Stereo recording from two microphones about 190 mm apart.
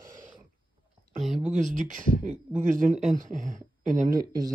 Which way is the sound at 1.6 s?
40° right (ahead or behind).